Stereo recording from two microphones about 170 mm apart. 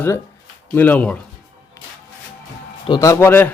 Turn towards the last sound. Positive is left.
turn(degrees=10)  # may be behind; listen again after turning